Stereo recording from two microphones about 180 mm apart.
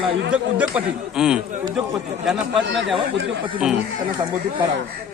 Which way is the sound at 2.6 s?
85° right.